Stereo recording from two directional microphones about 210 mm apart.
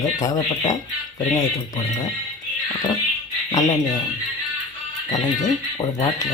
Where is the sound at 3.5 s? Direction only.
15° left (ahead or behind).